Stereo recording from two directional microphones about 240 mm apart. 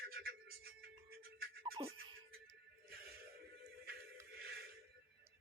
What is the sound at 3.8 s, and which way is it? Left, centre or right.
Music, right.